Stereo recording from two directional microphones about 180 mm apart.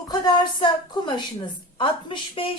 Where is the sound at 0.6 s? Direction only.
25° left (ahead or behind).